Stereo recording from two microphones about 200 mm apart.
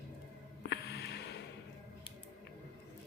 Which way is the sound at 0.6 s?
55° left (ahead or behind).